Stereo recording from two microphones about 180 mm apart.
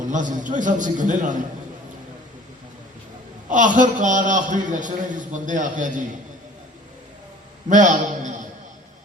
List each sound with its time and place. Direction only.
0.1 s a man's voice: 45° right (ahead or behind)
3.5 s a man's voice: 45° right (ahead or behind)
7.7 s a man's voice: 45° right (ahead or behind)